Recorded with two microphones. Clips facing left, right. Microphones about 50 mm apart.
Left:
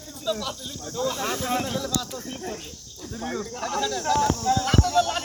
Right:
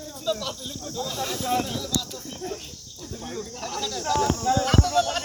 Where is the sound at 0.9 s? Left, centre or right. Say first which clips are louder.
Left 4 dB; left.